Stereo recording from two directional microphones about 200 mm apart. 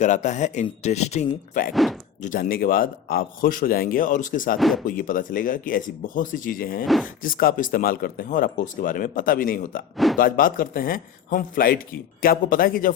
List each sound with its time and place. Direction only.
0.0 s speech: 35° left (ahead or behind)
1.7 s speech: centre (ahead or behind)
2.2 s speech: 45° left (ahead or behind)
4.5 s speech: centre (ahead or behind)
4.9 s speech: 45° left (ahead or behind)
6.8 s speech: centre (ahead or behind)
7.2 s speech: 45° left (ahead or behind)